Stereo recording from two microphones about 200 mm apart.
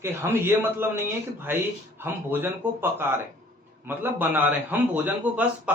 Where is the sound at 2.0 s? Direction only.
10° right (ahead or behind).